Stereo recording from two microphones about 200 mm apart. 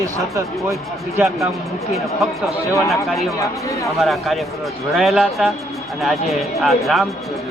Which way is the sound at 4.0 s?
Centre (ahead or behind).